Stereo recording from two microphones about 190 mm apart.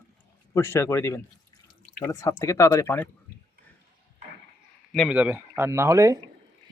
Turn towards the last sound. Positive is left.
turn(degrees=-15)  # may be behind; listen again after turning